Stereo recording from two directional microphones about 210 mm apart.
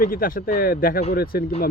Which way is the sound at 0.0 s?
45° left (ahead or behind).